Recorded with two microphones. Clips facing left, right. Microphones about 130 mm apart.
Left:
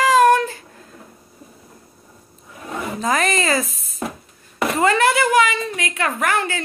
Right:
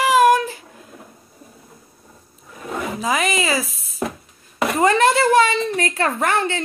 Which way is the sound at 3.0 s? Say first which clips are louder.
Left 2 dB; 5° right (ahead or behind).